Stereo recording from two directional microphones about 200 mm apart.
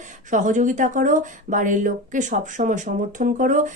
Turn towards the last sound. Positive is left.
turn(degrees=-40)  # may be behind; listen again after turning